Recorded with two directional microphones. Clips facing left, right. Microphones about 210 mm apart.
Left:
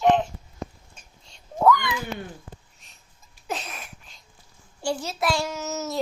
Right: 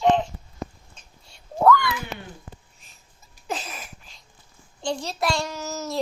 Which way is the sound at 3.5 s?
Centre (ahead or behind).